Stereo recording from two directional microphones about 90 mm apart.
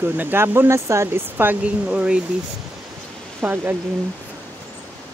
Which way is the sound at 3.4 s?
20° right (ahead or behind).